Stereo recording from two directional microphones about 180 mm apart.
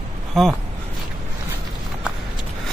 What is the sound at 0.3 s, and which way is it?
Speech, centre (ahead or behind).